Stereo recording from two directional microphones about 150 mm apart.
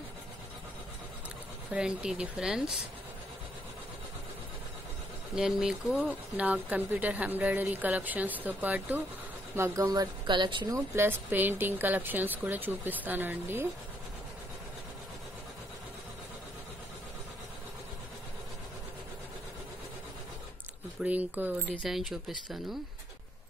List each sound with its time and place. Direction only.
1.7 s a woman's voice: 5° right (ahead or behind)
5.3 s speech: 5° right (ahead or behind)
9.6 s speech: 25° right (ahead or behind)
11.0 s speech: 15° right (ahead or behind)
21.0 s speech: 10° right (ahead or behind)
21.7 s a woman's voice: centre (ahead or behind)